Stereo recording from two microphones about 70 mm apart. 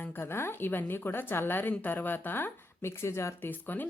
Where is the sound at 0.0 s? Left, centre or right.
Left.